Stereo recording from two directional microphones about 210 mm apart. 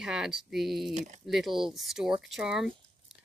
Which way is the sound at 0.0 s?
Centre (ahead or behind).